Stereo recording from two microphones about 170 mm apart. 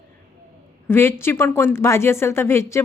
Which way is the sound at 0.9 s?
15° left (ahead or behind).